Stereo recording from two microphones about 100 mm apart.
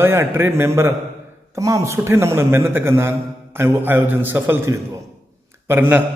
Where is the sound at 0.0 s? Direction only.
25° right (ahead or behind).